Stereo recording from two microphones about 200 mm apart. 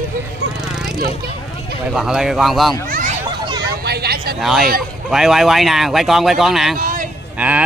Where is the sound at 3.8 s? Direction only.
55° right (ahead or behind).